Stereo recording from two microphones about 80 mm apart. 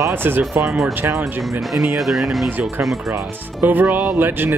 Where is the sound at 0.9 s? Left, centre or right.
Right.